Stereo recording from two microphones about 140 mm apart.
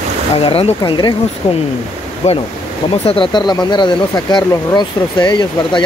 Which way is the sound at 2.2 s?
50° left (ahead or behind).